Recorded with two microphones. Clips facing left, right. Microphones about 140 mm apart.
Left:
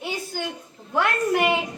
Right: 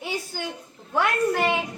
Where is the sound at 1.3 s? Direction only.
15° left (ahead or behind).